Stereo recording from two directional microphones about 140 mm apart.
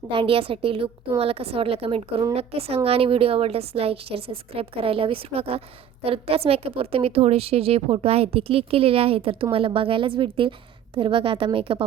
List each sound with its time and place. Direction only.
0.1 s a woman's voice: 40° right (ahead or behind)